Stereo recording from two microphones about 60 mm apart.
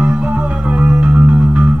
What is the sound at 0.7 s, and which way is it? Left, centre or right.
Music, right.